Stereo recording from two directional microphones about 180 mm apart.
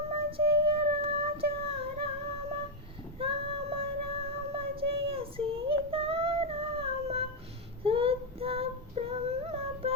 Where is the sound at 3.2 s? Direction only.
30° right (ahead or behind).